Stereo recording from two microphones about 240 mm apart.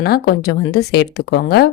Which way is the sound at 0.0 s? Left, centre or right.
Left.